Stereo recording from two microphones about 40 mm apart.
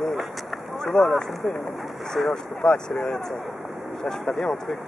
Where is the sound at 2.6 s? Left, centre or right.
Centre.